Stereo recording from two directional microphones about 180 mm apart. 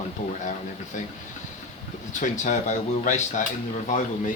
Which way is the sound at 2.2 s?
45° left (ahead or behind).